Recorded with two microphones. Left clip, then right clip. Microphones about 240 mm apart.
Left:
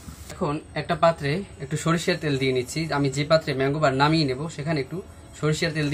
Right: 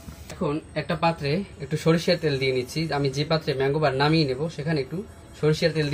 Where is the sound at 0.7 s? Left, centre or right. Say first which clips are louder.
Left 5 dB; left.